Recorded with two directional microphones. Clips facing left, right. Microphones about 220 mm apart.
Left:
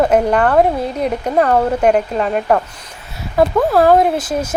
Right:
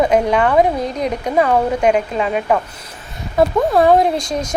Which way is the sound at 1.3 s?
10° right (ahead or behind).